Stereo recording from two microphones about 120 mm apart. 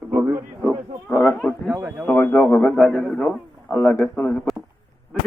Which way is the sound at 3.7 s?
20° left (ahead or behind).